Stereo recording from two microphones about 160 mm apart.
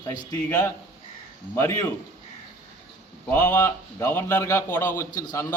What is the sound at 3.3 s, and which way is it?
A man's voice, 15° left (ahead or behind).